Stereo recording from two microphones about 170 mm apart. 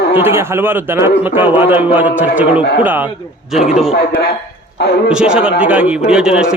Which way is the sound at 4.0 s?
70° left (ahead or behind).